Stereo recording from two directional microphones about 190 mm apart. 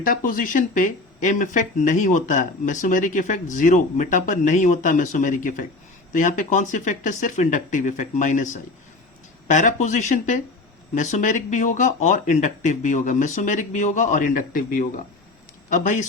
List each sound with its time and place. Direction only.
0.3 s speech: 45° left (ahead or behind)